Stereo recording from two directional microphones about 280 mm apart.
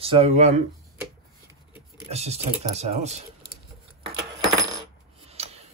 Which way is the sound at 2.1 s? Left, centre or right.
Right.